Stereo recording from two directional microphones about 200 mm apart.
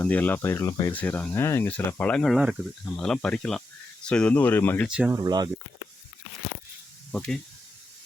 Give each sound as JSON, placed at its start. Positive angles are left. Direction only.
{"t": 0.0, "sound": "speech", "side_deg": 10}
{"t": 4.9, "sound": "speech", "side_deg": -5}
{"t": 5.2, "sound": "speech", "side_deg": -20}
{"t": 7.1, "sound": "speech", "side_deg": 5}